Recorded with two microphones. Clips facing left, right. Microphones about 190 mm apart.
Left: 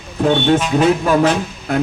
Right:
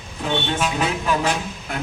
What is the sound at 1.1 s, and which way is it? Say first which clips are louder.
Speech: left 8 dB; 50° left (ahead or behind).